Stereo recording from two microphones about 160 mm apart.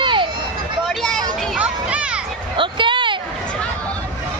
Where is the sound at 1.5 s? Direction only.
10° right (ahead or behind).